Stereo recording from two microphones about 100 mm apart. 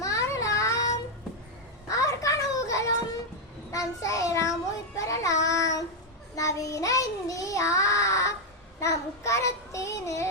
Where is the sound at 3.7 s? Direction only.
35° left (ahead or behind).